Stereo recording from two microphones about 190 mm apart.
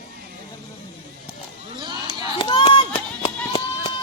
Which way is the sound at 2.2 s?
25° left (ahead or behind).